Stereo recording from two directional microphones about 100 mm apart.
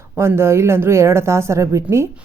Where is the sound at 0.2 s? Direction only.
25° right (ahead or behind).